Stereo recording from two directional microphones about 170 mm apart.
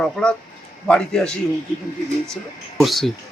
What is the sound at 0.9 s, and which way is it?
Speech, 5° left (ahead or behind).